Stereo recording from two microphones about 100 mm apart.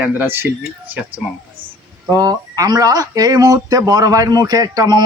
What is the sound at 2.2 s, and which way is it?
Speech, 40° right (ahead or behind).